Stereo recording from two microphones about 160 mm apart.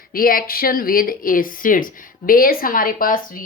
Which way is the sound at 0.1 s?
65° left (ahead or behind).